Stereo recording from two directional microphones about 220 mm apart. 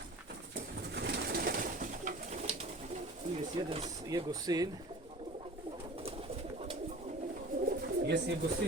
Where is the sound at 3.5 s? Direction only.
30° right (ahead or behind).